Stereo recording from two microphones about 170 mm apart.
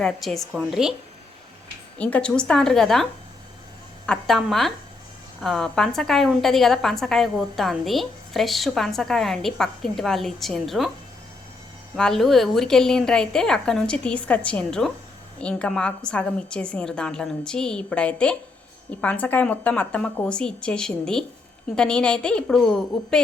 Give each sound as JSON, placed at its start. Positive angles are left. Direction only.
{"t": 0.0, "sound": "a woman's voice", "side_deg": 0}
{"t": 2.0, "sound": "a woman's voice", "side_deg": 10}
{"t": 11.9, "sound": "a woman's voice", "side_deg": 5}